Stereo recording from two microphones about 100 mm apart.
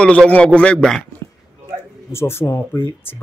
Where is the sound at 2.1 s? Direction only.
25° left (ahead or behind).